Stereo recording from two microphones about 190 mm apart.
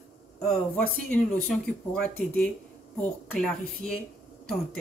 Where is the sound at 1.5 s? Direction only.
5° left (ahead or behind).